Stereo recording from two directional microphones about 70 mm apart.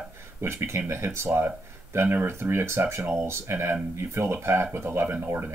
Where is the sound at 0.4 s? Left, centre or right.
Right.